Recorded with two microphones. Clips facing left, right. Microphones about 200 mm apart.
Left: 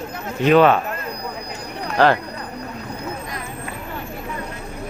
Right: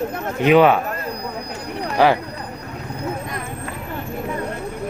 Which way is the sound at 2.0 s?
10° right (ahead or behind).